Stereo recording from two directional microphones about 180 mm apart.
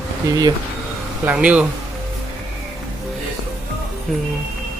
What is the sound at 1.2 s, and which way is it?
Speech, 5° right (ahead or behind).